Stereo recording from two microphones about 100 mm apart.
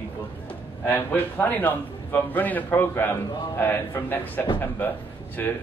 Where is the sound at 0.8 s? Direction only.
20° left (ahead or behind).